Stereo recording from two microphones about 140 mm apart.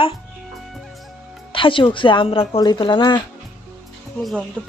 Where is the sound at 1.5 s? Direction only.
35° left (ahead or behind).